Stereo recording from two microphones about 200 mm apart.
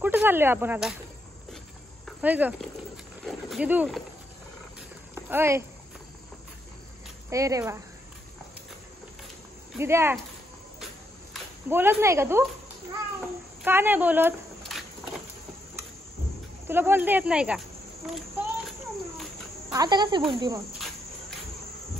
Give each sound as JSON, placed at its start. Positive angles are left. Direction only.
{"t": 0.0, "sound": "speech", "side_deg": -10}
{"t": 2.0, "sound": "speech", "side_deg": -10}
{"t": 5.1, "sound": "speech", "side_deg": -10}
{"t": 7.2, "sound": "speech", "side_deg": -15}
{"t": 9.8, "sound": "speech", "side_deg": -10}
{"t": 11.7, "sound": "speech", "side_deg": -10}
{"t": 13.7, "sound": "speech", "side_deg": -10}
{"t": 14.7, "sound": "a sound", "side_deg": 0}
{"t": 16.6, "sound": "speech", "side_deg": -10}
{"t": 19.7, "sound": "speech", "side_deg": -20}